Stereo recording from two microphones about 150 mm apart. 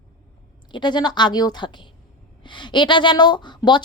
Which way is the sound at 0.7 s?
30° left (ahead or behind).